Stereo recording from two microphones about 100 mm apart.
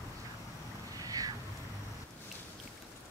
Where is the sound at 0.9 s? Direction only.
35° right (ahead or behind).